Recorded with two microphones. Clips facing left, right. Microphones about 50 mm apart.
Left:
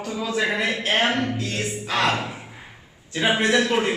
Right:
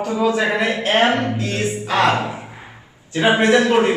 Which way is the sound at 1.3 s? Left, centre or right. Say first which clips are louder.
Right 5 dB; centre.